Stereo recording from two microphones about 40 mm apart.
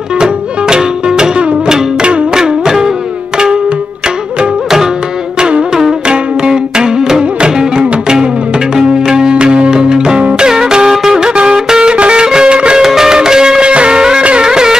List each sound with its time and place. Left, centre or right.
0.2 s music: centre
2.3 s music: centre
6.0 s music: centre
12.8 s music: centre